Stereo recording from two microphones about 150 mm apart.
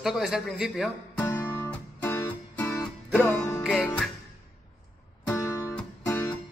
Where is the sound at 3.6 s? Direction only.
5° left (ahead or behind).